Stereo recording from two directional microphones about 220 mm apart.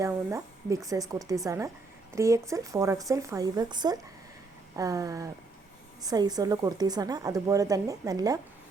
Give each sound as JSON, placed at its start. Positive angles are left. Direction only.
{"t": 0.0, "sound": "speech", "side_deg": -15}